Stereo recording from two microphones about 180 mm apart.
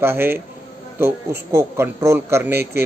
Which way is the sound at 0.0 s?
15° right (ahead or behind).